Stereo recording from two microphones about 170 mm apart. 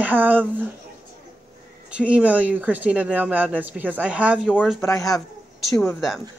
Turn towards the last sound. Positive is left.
turn(degrees=5)  # may be behind; listen again after turning